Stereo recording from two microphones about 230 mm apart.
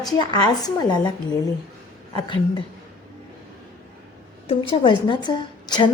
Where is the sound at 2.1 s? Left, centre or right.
Left.